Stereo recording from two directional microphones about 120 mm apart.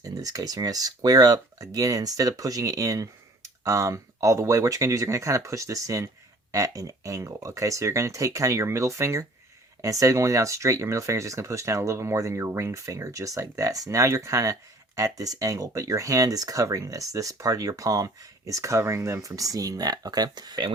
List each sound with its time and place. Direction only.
0.0 s speech: 30° right (ahead or behind)